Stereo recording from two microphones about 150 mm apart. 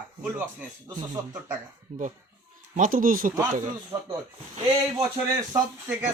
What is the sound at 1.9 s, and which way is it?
Speech, 45° right (ahead or behind).